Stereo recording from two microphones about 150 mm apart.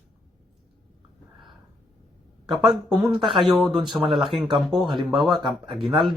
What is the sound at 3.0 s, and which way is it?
Speech, centre (ahead or behind).